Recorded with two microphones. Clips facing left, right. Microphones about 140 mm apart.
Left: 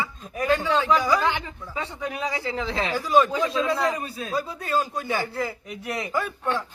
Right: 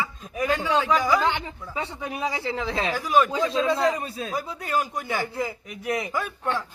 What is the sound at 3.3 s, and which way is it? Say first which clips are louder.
Speech: right 1 dB; 25° right (ahead or behind).